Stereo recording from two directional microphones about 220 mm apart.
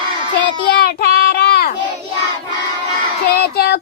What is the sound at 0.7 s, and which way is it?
Child singing, 45° left (ahead or behind).